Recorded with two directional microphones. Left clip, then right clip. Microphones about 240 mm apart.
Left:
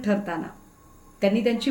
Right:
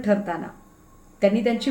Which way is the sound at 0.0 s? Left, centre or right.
Centre.